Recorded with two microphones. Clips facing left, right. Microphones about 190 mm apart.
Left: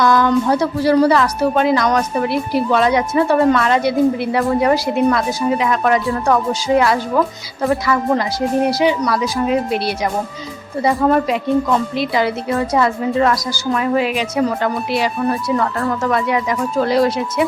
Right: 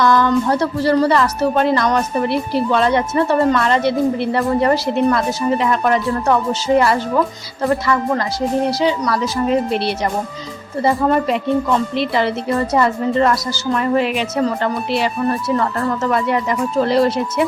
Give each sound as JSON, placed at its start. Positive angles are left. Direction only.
{"t": 0.0, "sound": "a woman's voice", "side_deg": 10}
{"t": 8.1, "sound": "a woman's voice", "side_deg": 15}